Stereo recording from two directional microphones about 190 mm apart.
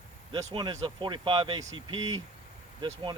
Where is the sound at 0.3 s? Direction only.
20° right (ahead or behind).